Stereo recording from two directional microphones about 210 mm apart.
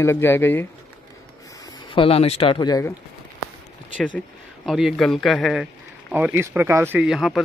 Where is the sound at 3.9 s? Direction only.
5° left (ahead or behind).